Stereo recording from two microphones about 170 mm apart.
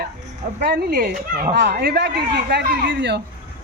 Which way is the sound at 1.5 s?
75° right (ahead or behind).